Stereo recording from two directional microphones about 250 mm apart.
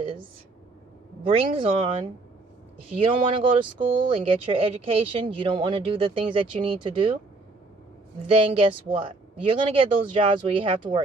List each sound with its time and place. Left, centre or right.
1.2 s speech: right
8.3 s speech: right